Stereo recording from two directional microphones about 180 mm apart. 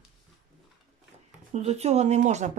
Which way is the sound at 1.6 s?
35° right (ahead or behind).